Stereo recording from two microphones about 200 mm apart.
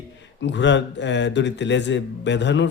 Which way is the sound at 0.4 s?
60° left (ahead or behind).